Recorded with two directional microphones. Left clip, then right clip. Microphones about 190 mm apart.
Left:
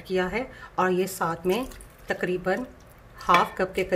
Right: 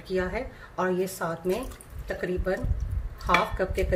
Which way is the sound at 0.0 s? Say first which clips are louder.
Left 2 dB; 20° left (ahead or behind).